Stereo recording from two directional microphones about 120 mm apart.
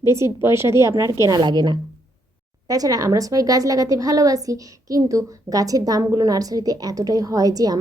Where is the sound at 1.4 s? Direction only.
35° right (ahead or behind).